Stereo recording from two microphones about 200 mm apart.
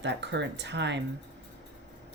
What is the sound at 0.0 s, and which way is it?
Speech, 60° right (ahead or behind).